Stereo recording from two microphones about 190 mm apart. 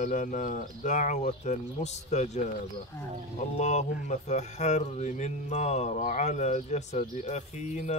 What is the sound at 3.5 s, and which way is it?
Speech, 40° left (ahead or behind).